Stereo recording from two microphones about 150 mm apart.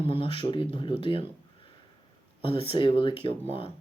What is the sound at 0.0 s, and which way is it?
Speech, 40° left (ahead or behind).